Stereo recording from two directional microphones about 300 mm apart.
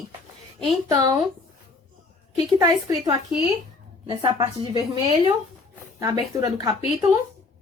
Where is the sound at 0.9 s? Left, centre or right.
Centre.